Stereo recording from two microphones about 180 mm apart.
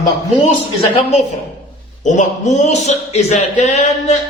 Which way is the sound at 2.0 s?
40° left (ahead or behind).